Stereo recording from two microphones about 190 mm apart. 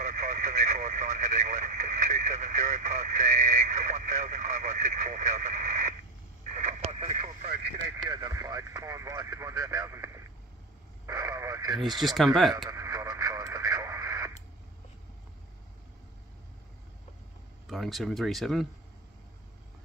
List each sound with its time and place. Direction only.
0.0 s radio: 40° right (ahead or behind)
8.0 s radio: 20° right (ahead or behind)
11.7 s speech: centre (ahead or behind)
12.6 s radio: 15° right (ahead or behind)
17.6 s speech: centre (ahead or behind)